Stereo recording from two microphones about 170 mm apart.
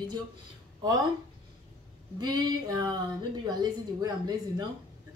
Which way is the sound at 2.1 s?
25° right (ahead or behind).